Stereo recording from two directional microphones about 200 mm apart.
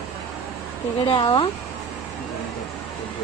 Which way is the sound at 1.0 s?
25° left (ahead or behind).